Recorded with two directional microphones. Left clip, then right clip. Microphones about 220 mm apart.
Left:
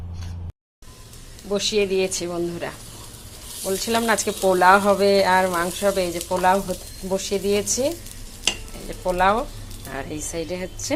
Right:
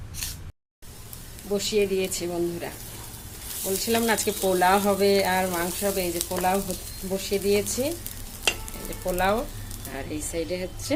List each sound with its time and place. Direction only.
1.5 s speech: centre (ahead or behind)
9.0 s speech: centre (ahead or behind)